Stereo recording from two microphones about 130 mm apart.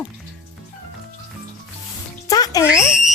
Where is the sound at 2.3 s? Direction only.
30° left (ahead or behind).